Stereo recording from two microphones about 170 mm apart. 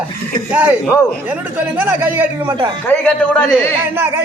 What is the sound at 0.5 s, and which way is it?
A man's voice, 10° right (ahead or behind).